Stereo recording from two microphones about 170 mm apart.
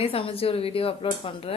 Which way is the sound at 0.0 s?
35° left (ahead or behind).